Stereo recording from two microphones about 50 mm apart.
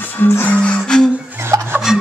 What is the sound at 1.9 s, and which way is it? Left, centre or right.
Filing, centre.